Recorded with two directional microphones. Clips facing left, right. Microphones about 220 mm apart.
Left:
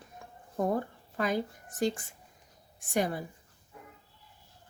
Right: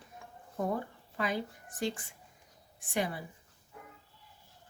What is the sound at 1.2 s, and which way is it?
Speech, 45° left (ahead or behind).